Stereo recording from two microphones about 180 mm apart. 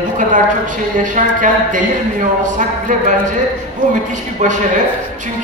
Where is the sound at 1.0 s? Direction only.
45° right (ahead or behind).